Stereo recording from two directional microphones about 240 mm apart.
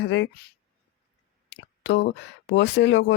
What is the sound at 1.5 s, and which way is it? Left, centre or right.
Speech, left.